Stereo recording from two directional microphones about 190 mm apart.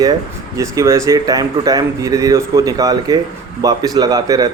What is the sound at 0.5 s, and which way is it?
A man's voice, 15° right (ahead or behind).